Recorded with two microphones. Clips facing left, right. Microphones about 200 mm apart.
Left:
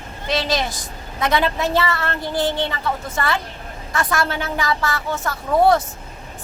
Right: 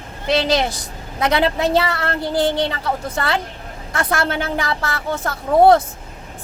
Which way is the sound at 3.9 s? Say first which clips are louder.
Right 1 dB; 55° right (ahead or behind).